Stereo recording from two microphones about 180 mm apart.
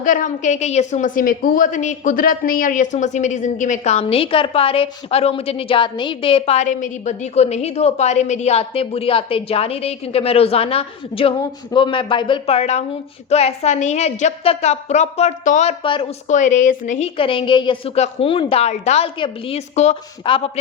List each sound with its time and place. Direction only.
0.0 s a woman's voice: 45° left (ahead or behind)
17.2 s a woman's voice: 30° left (ahead or behind)